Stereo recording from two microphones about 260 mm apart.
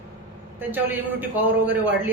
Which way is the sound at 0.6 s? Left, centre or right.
Centre.